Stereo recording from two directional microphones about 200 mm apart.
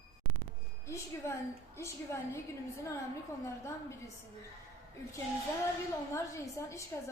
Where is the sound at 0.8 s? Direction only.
15° left (ahead or behind).